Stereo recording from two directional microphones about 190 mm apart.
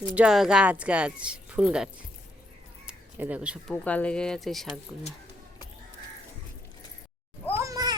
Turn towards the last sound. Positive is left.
turn(degrees=-20)  # may be behind; listen again after turning